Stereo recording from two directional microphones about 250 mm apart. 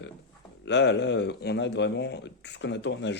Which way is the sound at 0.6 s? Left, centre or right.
Left.